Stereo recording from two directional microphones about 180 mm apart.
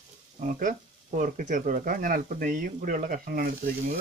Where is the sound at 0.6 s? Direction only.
45° right (ahead or behind).